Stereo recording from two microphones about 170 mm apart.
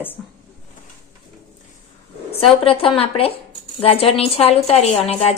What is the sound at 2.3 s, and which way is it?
A woman's voice, 35° left (ahead or behind).